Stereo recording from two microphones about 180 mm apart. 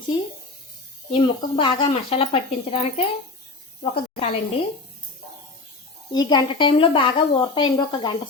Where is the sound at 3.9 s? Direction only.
30° left (ahead or behind).